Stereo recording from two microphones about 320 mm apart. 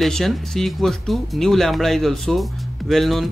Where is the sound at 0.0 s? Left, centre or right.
Centre.